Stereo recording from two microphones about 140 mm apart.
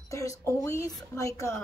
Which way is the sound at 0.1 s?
25° left (ahead or behind).